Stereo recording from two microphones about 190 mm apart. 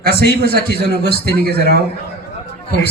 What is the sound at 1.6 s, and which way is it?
Speech, 60° left (ahead or behind).